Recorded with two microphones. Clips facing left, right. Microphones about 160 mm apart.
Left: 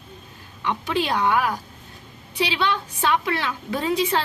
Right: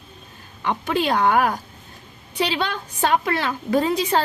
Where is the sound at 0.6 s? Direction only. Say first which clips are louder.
Right 2 dB; 50° right (ahead or behind).